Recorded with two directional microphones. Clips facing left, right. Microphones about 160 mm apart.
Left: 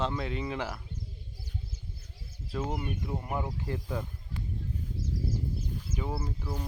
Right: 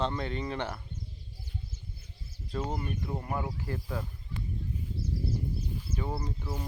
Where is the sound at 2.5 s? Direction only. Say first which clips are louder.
Even; 5° left (ahead or behind).